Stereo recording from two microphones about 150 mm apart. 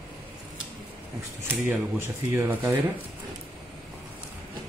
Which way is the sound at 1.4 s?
15° right (ahead or behind).